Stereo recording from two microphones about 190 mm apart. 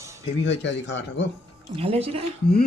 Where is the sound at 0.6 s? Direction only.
70° left (ahead or behind).